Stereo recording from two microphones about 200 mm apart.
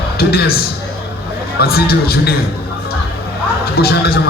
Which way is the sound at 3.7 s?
50° left (ahead or behind).